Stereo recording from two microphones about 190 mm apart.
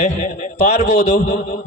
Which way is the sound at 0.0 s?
40° left (ahead or behind).